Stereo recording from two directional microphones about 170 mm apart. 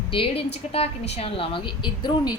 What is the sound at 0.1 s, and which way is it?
A woman's voice, 35° left (ahead or behind).